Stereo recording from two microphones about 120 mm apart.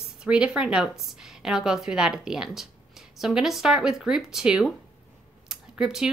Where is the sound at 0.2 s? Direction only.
5° right (ahead or behind).